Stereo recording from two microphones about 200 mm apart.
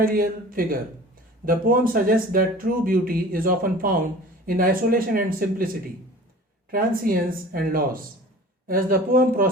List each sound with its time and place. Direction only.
0.0 s speech: 45° right (ahead or behind)
6.7 s speech: 45° right (ahead or behind)